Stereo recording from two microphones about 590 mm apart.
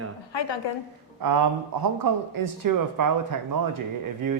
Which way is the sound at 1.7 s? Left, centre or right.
Right.